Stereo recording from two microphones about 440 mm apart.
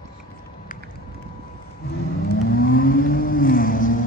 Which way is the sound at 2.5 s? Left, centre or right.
Centre.